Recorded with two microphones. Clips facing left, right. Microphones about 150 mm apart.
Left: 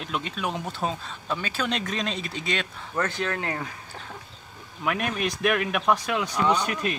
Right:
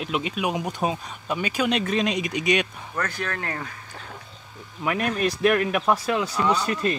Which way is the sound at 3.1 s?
20° left (ahead or behind).